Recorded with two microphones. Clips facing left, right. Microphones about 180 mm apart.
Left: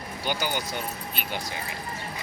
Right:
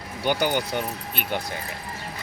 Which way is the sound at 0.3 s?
55° right (ahead or behind).